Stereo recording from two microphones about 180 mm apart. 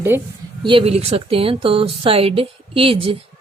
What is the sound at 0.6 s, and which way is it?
A woman's voice, 30° right (ahead or behind).